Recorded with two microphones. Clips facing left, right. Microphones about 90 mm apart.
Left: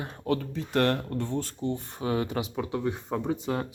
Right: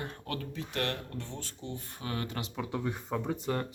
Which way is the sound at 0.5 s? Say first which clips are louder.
Left 8 dB; 45° left (ahead or behind).